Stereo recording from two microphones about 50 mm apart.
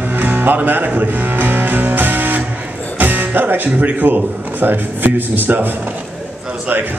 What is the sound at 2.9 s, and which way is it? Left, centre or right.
A man's voice, right.